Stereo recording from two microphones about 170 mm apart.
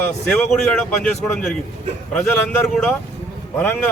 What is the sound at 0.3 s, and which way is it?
A man's voice, 5° left (ahead or behind).